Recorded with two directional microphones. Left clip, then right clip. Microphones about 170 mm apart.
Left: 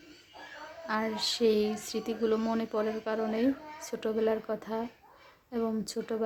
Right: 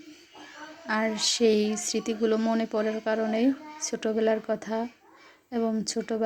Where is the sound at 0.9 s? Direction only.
10° right (ahead or behind).